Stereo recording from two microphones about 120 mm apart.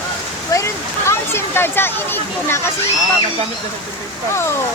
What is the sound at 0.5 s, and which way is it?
Speech, 25° left (ahead or behind).